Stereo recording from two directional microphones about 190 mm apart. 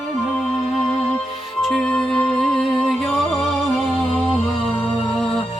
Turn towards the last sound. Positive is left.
turn(degrees=0)  # may be behind; listen again after turning